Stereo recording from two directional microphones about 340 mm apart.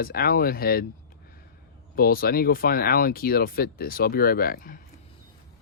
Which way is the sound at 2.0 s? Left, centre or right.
Left.